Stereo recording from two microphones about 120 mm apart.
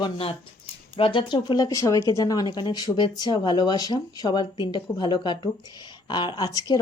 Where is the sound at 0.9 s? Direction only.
50° left (ahead or behind).